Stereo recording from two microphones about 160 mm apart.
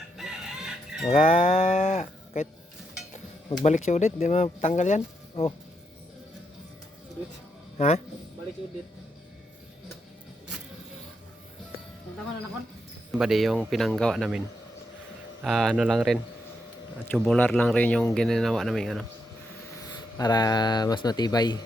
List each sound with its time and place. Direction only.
0.2 s chicken: 5° right (ahead or behind)
1.0 s livestock: 45° left (ahead or behind)
3.6 s speech: 45° left (ahead or behind)
5.3 s speech: 35° left (ahead or behind)
7.8 s speech: 45° left (ahead or behind)
13.1 s speech: centre (ahead or behind)
15.4 s speech: centre (ahead or behind)
17.2 s speech: 5° left (ahead or behind)
19.9 s speech: 25° left (ahead or behind)